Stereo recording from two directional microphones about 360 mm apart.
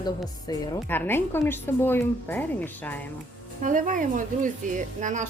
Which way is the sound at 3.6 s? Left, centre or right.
Right.